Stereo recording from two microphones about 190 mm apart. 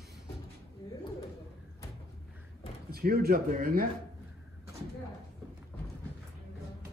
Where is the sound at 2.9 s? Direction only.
55° right (ahead or behind).